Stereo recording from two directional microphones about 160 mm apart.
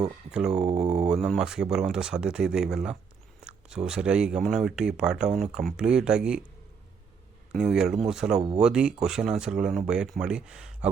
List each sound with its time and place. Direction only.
0.3 s speech: 5° right (ahead or behind)
0.6 s speech: 40° right (ahead or behind)
1.0 s speech: centre (ahead or behind)
7.5 s speech: 5° right (ahead or behind)